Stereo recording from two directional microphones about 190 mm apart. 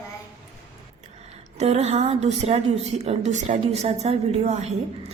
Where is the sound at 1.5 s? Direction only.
35° right (ahead or behind).